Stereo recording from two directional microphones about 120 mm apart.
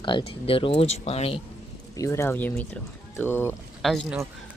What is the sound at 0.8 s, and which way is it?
Speech, 70° left (ahead or behind).